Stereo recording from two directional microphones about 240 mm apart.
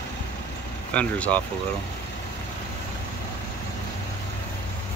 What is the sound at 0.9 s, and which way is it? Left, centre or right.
Speech, centre.